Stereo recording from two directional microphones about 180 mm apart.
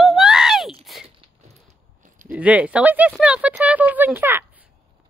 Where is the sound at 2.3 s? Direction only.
5° right (ahead or behind).